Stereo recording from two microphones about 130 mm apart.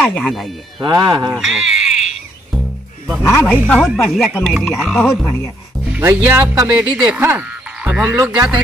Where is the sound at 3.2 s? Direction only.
20° left (ahead or behind).